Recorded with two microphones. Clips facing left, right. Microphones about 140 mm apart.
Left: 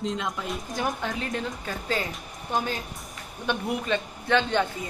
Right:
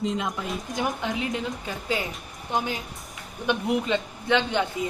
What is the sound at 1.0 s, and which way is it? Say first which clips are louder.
A woman's voice: right 2 dB; 15° right (ahead or behind).